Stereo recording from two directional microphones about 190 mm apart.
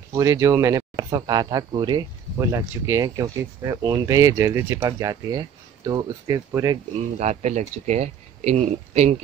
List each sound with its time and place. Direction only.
0.1 s speech: 15° right (ahead or behind)
7.2 s speech: 35° right (ahead or behind)